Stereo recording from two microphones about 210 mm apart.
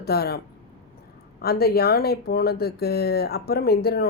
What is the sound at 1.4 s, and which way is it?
Speech, 50° left (ahead or behind).